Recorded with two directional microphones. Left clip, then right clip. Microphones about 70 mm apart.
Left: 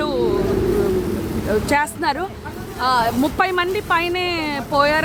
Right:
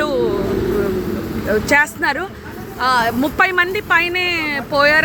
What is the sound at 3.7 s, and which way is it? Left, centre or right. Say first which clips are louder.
Speech: right 3 dB; left.